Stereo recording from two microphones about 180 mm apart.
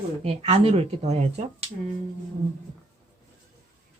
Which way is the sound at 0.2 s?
35° right (ahead or behind).